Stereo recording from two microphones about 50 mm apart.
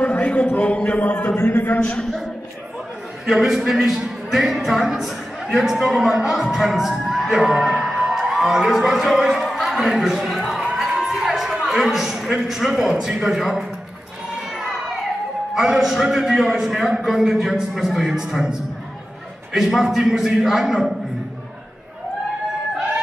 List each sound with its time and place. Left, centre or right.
0.0 s a man's voice: left
3.3 s a man's voice: centre
9.6 s a sound: centre
13.0 s a man's voice: centre
14.5 s a sound: centre
15.5 s a man's voice: centre